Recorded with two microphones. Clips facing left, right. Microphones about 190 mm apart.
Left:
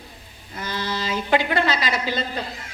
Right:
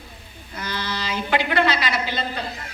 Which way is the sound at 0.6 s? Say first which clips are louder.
Left 2 dB; 45° left (ahead or behind).